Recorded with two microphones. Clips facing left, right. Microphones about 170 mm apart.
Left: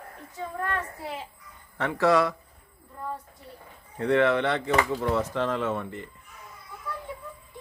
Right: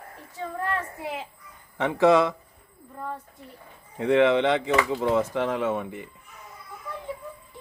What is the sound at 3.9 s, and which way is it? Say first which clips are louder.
Speech: right 3 dB; 15° right (ahead or behind).